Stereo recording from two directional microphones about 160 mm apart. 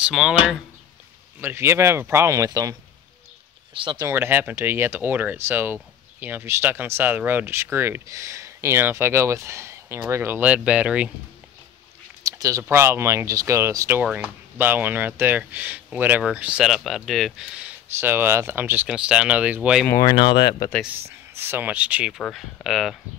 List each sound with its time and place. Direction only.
0.0 s speech: 5° right (ahead or behind)
1.4 s speech: 15° right (ahead or behind)
3.7 s speech: 30° right (ahead or behind)
4.1 s speech: 15° right (ahead or behind)
12.2 s speech: 20° right (ahead or behind)
19.9 s speech: 20° left (ahead or behind)
21.4 s speech: 10° right (ahead or behind)